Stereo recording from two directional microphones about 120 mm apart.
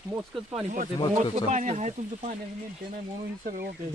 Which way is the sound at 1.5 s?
85° right.